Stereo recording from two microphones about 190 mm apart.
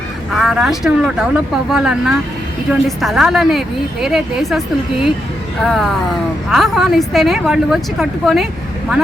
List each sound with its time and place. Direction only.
0.3 s a woman's voice: centre (ahead or behind)
6.5 s a woman's voice: centre (ahead or behind)